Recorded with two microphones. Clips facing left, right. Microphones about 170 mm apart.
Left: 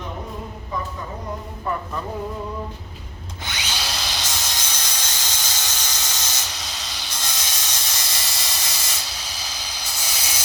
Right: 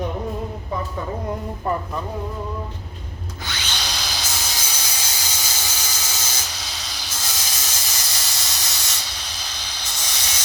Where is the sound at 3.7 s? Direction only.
5° left (ahead or behind).